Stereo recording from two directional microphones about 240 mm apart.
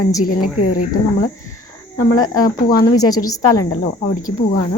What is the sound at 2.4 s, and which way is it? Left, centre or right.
Speech, left.